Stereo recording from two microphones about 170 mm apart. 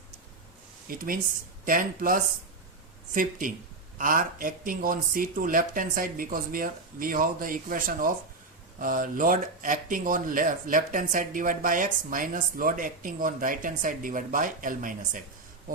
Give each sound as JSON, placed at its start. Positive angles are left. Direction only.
{"t": 0.9, "sound": "speech", "side_deg": -55}